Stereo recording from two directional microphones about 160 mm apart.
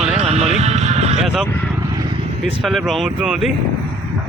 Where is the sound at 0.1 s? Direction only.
45° right (ahead or behind).